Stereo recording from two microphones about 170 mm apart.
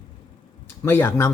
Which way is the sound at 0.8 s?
10° left (ahead or behind).